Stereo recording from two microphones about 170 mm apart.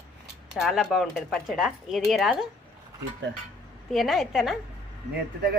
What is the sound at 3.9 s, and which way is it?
Speech, centre (ahead or behind).